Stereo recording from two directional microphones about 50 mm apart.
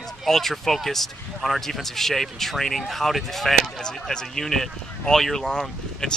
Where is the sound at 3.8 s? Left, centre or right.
Centre.